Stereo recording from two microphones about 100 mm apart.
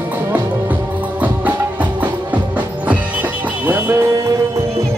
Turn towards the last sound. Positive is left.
turn(degrees=-20)  # may be behind; listen again after turning